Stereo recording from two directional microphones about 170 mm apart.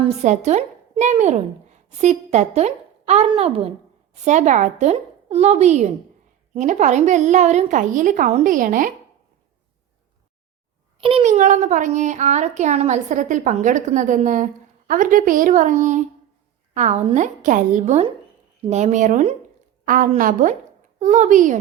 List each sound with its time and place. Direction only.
0.0 s a woman's voice: 40° right (ahead or behind)
11.0 s a child's voice: 35° right (ahead or behind)
19.8 s a woman's voice: 55° right (ahead or behind)